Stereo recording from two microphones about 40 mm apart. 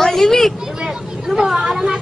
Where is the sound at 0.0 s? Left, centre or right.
Centre.